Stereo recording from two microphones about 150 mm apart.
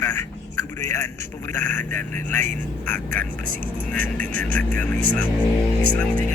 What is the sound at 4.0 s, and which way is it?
Speech, 65° right (ahead or behind).